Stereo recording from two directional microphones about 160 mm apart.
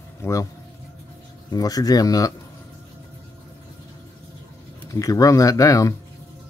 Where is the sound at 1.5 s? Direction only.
20° left (ahead or behind).